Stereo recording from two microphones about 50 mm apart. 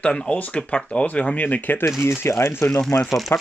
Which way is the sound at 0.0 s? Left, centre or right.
Left.